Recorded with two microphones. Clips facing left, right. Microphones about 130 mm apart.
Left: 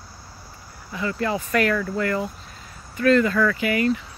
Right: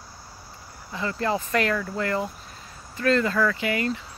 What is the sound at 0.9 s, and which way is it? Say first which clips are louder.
Speech: left 1 dB; 30° right (ahead or behind).